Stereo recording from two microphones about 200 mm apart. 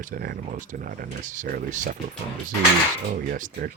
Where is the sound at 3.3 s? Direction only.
45° right (ahead or behind).